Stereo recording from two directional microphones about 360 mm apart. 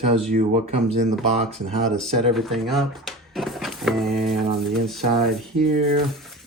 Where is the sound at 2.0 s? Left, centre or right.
Centre.